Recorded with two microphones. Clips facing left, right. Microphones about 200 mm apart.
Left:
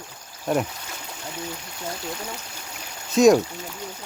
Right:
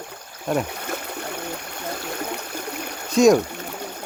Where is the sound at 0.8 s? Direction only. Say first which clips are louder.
Right 7 dB; 60° right (ahead or behind).